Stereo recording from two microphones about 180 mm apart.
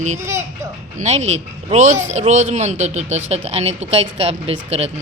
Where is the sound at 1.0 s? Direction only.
40° right (ahead or behind).